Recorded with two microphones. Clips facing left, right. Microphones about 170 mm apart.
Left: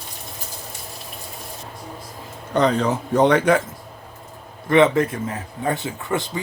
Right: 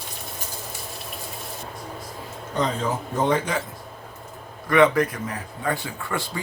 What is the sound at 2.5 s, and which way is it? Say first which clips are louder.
A man's voice: left 6 dB; 70° left (ahead or behind).